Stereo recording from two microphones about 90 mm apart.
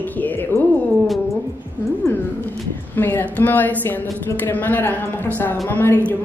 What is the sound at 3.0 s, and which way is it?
Speech, 20° left (ahead or behind).